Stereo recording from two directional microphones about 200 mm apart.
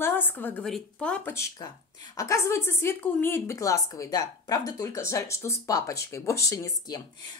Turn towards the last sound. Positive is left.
turn(degrees=15)  # may be behind; listen again after turning